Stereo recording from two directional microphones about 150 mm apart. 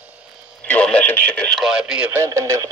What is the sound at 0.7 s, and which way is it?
Speech, 10° left (ahead or behind).